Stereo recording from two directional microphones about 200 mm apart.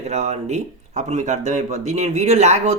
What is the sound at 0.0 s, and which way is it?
Speech, 35° right (ahead or behind).